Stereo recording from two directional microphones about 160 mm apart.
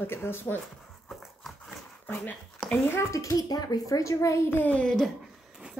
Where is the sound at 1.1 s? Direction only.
Centre (ahead or behind).